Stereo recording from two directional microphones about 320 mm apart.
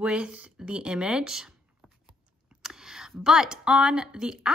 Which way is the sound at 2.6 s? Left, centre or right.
Centre.